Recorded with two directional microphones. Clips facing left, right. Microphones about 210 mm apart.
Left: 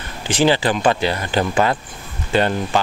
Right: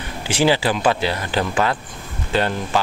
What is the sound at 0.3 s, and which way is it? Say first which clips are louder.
Speech: left 1 dB; 10° right (ahead or behind).